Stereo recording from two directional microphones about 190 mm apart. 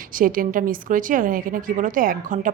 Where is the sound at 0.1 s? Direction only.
45° right (ahead or behind).